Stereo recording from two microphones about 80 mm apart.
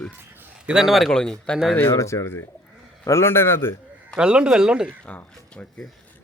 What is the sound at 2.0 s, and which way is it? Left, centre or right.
A man's voice, left.